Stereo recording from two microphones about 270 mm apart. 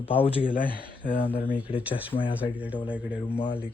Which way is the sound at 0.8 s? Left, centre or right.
Left.